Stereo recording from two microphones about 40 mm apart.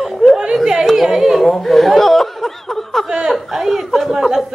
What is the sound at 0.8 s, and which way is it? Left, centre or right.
Speech, centre.